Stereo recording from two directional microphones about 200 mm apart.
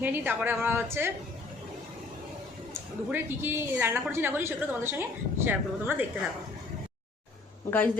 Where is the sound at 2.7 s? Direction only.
10° right (ahead or behind).